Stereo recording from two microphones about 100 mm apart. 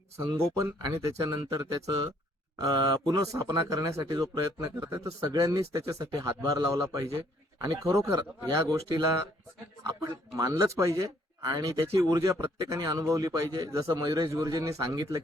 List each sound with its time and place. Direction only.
0.2 s speech: 35° right (ahead or behind)